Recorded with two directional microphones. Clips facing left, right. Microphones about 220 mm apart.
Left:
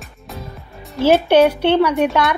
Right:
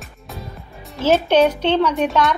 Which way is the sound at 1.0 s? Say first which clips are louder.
Left 3 dB; 10° left (ahead or behind).